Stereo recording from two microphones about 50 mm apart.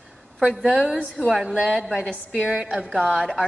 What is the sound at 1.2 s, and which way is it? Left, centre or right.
A woman's voice, centre.